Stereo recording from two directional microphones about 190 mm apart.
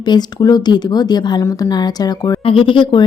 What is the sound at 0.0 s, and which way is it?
Speech, 20° left (ahead or behind).